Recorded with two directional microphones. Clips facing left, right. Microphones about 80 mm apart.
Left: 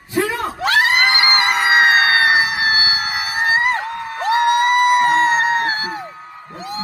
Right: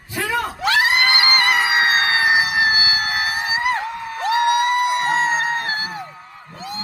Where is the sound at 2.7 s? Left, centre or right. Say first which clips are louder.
Left 1 dB; left.